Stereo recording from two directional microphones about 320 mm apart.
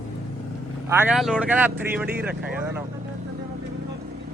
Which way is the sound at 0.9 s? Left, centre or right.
Centre.